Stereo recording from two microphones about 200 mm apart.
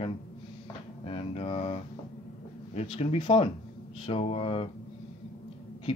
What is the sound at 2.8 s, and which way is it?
Speech, 30° left (ahead or behind).